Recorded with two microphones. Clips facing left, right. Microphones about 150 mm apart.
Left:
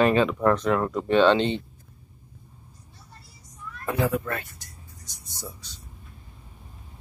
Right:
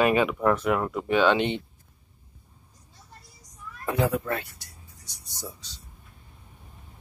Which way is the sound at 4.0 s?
20° right (ahead or behind).